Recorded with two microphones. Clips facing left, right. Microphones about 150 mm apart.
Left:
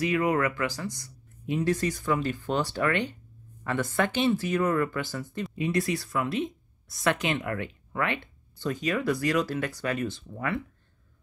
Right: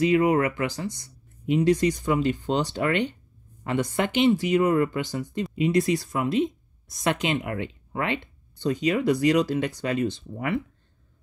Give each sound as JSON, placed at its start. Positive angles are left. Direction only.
{"t": 0.0, "sound": "speech", "side_deg": -25}